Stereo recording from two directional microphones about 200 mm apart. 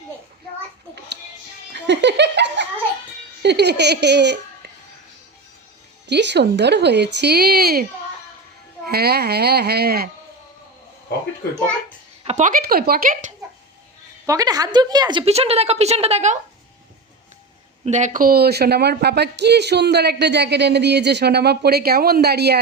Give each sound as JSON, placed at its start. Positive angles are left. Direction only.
{"t": 1.7, "sound": "giggle", "side_deg": -60}
{"t": 3.4, "sound": "speech", "side_deg": -55}
{"t": 6.1, "sound": "speech", "side_deg": -60}
{"t": 8.9, "sound": "a woman's voice", "side_deg": -50}
{"t": 12.2, "sound": "a woman's voice", "side_deg": -35}
{"t": 14.3, "sound": "a woman's voice", "side_deg": -20}
{"t": 17.8, "sound": "speech", "side_deg": -35}